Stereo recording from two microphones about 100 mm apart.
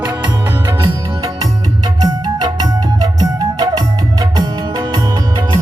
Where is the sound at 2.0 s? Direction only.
40° right (ahead or behind).